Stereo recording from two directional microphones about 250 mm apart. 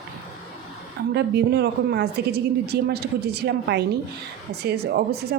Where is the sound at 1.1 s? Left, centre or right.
Right.